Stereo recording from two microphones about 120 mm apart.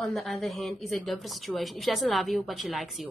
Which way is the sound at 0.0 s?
Centre (ahead or behind).